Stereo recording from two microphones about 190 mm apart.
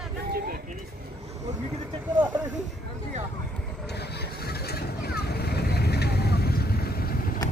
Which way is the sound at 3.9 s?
60° left (ahead or behind).